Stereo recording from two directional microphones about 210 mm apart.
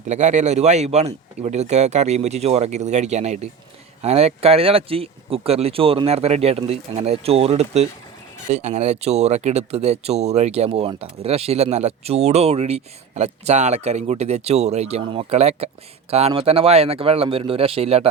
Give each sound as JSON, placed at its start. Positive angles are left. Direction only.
{"t": 0.1, "sound": "speech", "side_deg": -35}